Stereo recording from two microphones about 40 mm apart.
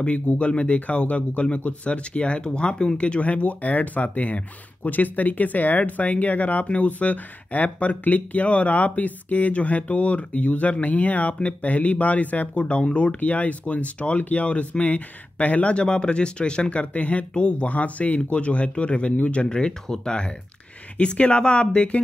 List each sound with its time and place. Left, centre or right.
0.4 s speech: left